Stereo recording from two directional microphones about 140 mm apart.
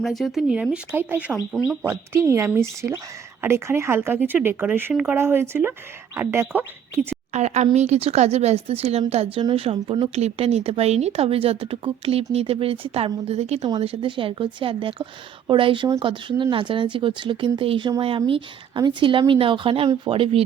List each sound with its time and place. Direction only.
0.0 s speech: centre (ahead or behind)
1.5 s speech: 5° left (ahead or behind)
2.2 s speech: 20° right (ahead or behind)
7.3 s a woman's voice: 55° right (ahead or behind)